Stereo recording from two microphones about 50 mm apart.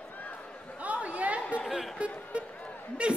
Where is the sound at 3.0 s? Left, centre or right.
Right.